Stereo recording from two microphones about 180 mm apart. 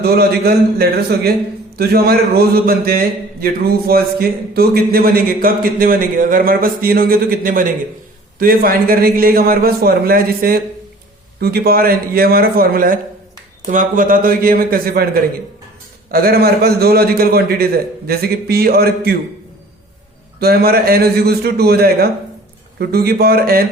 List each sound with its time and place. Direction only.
0.0 s a man's voice: 60° right (ahead or behind)
20.4 s a man's voice: 60° right (ahead or behind)